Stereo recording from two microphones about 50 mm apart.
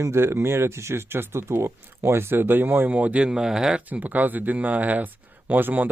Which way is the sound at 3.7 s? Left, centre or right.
Right.